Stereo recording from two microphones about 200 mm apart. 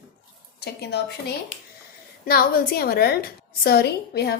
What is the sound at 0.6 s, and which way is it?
A woman's voice, 55° left (ahead or behind).